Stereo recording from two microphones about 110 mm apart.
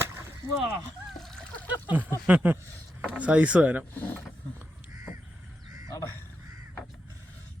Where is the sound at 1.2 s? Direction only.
5° left (ahead or behind).